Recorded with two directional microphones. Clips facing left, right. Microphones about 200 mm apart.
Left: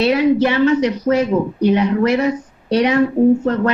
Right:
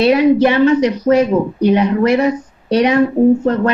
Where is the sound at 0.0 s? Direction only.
15° right (ahead or behind).